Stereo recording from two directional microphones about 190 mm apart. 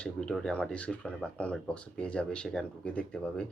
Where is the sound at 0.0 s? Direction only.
5° left (ahead or behind).